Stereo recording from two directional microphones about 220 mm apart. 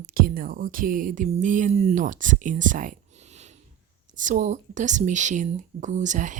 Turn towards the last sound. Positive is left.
turn(degrees=-35)  # may be behind; listen again after turning